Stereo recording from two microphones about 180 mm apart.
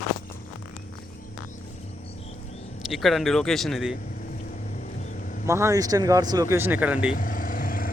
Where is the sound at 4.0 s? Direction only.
50° left (ahead or behind).